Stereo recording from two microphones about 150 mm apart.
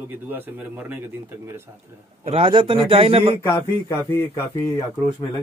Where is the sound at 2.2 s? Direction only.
35° right (ahead or behind).